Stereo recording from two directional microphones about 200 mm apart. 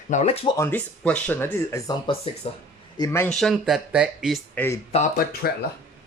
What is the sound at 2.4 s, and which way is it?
Speech, 30° left (ahead or behind).